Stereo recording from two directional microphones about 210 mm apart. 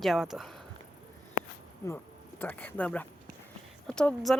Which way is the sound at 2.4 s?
10° left (ahead or behind).